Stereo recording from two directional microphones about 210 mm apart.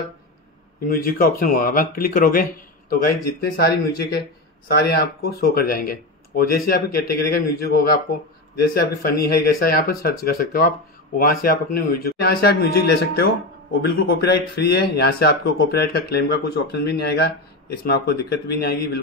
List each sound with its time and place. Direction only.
0.8 s speech: 45° left (ahead or behind)